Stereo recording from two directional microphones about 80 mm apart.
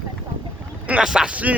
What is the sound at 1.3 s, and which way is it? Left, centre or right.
Speech, centre.